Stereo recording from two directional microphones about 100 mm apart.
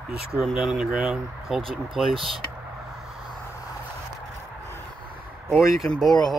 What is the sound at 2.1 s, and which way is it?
Speech, 60° right (ahead or behind).